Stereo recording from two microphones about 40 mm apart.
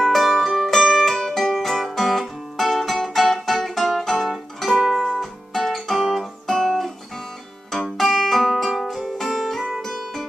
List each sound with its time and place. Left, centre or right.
0.0 s music: centre